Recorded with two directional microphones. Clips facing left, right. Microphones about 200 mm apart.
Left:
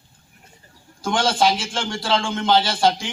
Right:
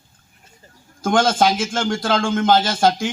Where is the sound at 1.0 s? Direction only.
45° right (ahead or behind).